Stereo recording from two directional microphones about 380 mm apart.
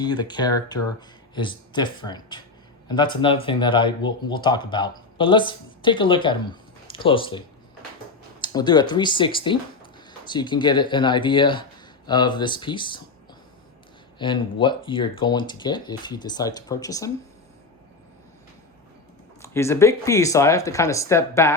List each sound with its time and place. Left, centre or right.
0.0 s speech: centre
14.2 s speech: centre
19.4 s speech: centre